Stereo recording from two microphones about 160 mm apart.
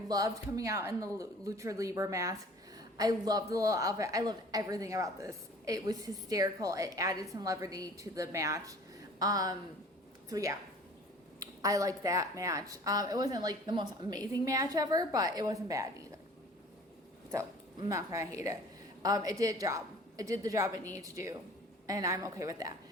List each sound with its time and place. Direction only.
0.1 s a woman's voice: 20° right (ahead or behind)
17.3 s a woman's voice: 20° right (ahead or behind)